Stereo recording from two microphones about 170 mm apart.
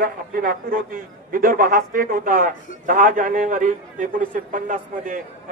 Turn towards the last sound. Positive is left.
turn(degrees=-50)  # may be behind; listen again after turning